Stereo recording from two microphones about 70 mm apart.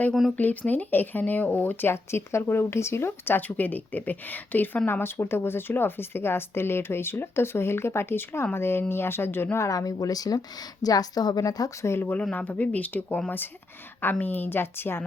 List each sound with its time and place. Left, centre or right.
0.1 s speech: centre
0.7 s speech: left
9.6 s a woman's voice: left
11.9 s speech: left
12.2 s speech: centre